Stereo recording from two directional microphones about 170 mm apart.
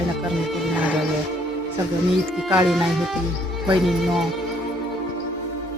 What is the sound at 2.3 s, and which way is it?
Speech, 5° right (ahead or behind).